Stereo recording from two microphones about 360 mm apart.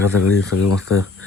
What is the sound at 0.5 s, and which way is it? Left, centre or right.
Speech, left.